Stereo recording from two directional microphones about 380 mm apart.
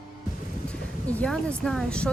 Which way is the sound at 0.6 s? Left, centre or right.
Centre.